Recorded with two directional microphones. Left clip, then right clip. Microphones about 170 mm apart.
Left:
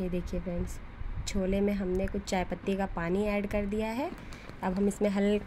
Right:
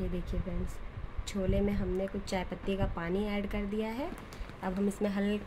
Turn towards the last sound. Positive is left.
turn(degrees=20)  # may be behind; listen again after turning